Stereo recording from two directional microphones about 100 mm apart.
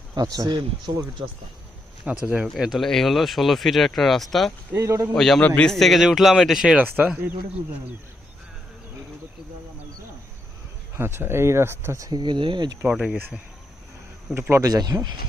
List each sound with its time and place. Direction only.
0.2 s speech: 40° right (ahead or behind)
2.2 s speech: 10° right (ahead or behind)
4.8 s speech: 35° right (ahead or behind)
5.1 s speech: 5° left (ahead or behind)
5.4 s speech: 15° left (ahead or behind); by 6.7 s centre (ahead or behind)
6.7 s speech: 15° right (ahead or behind)
10.9 s speech: 25° right (ahead or behind)
12.2 s speech: 50° right (ahead or behind)
12.9 s speech: 5° right (ahead or behind)
14.3 s speech: 25° right (ahead or behind)
14.7 s speech: 40° right (ahead or behind)